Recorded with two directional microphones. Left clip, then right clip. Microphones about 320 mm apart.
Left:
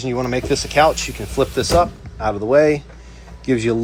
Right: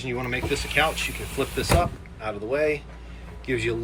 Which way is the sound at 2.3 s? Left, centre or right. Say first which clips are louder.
Left 10 dB; left.